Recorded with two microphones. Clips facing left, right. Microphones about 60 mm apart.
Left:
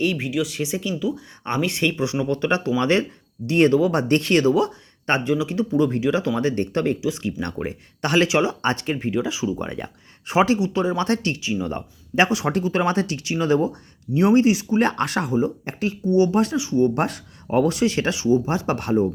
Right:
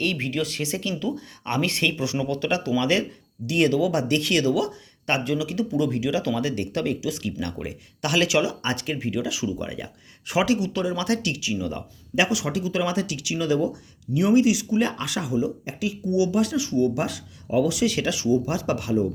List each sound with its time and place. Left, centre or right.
0.0 s speech: centre; by 14.8 s left
14.8 s speech: left
16.9 s speech: left
18.8 s speech: left